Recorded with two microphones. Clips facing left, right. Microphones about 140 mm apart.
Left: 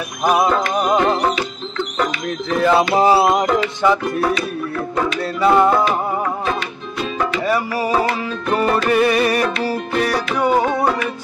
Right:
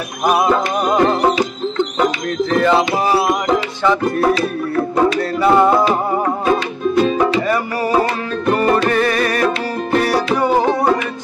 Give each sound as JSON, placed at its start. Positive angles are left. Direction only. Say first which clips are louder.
{"t": 2.5, "sound": "a sound", "louder": "right 1 dB", "side_deg": 5}
{"t": 2.9, "sound": "music", "louder": "left 2 dB", "side_deg": 25}
{"t": 4.2, "sound": "music", "louder": "right 4 dB", "side_deg": -30}
{"t": 5.4, "sound": "a sound", "louder": "right 1 dB", "side_deg": 0}
{"t": 8.9, "sound": "music", "louder": "left 1 dB", "side_deg": 10}
{"t": 10.0, "sound": "music", "louder": "right 2 dB", "side_deg": -5}